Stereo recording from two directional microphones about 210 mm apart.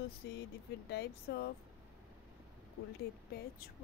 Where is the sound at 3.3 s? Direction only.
50° left (ahead or behind).